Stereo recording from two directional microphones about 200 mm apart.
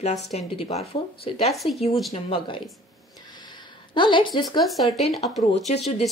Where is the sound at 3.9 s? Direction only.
25° left (ahead or behind).